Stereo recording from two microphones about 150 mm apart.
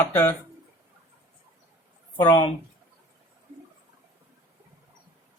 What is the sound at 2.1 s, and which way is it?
Speech, 30° left (ahead or behind).